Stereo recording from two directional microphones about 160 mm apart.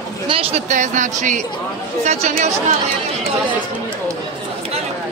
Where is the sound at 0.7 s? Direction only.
50° right (ahead or behind).